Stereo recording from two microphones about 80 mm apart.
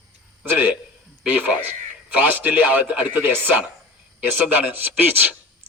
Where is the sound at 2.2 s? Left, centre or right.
Right.